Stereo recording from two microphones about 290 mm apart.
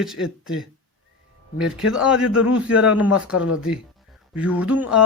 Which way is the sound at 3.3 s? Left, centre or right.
Left.